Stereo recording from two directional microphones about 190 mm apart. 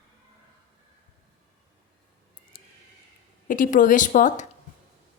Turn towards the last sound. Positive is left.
turn(degrees=40)  # may be behind; listen again after turning